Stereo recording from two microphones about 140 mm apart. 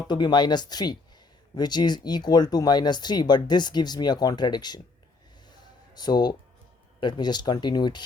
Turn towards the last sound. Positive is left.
turn(degrees=30)  # may be behind; listen again after turning